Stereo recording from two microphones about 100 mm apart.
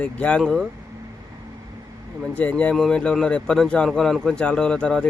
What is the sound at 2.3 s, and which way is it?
Speech, 15° left (ahead or behind).